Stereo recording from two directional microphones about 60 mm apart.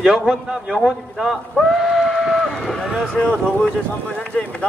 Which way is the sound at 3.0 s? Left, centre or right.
Centre.